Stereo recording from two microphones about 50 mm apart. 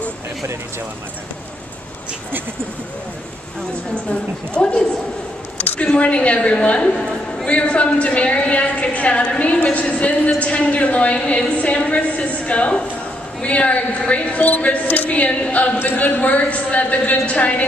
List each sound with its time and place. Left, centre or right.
3.9 s a woman's voice: left